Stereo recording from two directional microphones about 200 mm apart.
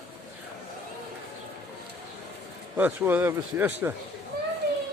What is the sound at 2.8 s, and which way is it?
Speech, 10° right (ahead or behind).